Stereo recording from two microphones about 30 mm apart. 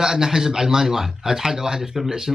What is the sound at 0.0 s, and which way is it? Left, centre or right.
Speech, centre.